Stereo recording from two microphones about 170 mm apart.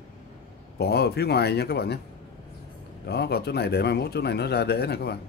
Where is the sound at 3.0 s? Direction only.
75° left (ahead or behind).